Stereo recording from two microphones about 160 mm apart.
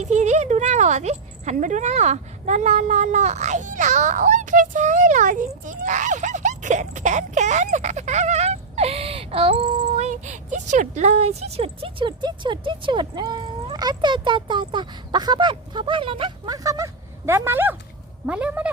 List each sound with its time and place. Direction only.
0.0 s speech: 45° right (ahead or behind)
16.6 s speech: 20° right (ahead or behind)